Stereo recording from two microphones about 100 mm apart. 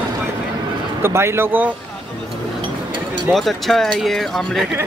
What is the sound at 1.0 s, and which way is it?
Speech, 25° right (ahead or behind).